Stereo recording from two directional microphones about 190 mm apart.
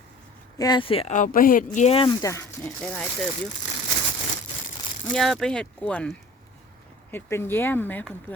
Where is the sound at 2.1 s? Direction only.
15° left (ahead or behind).